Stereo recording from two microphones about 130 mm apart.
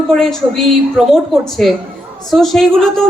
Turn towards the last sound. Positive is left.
turn(degrees=5)  # may be behind; listen again after turning